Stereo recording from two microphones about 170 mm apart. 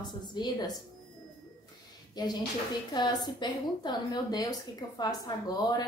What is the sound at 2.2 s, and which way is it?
A woman's voice, 25° left (ahead or behind).